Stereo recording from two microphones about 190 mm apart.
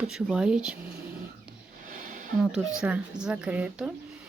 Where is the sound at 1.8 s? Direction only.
45° right (ahead or behind).